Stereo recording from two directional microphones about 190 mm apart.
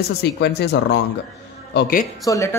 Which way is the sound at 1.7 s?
50° left (ahead or behind).